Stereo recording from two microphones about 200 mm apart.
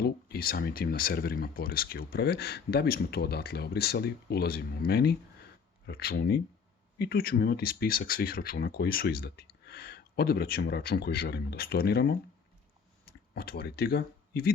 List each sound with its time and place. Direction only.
0.0 s speech: 50° left (ahead or behind)
13.3 s speech: 50° left (ahead or behind)